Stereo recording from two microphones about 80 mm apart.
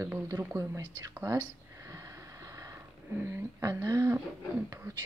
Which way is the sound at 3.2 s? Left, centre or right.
Right.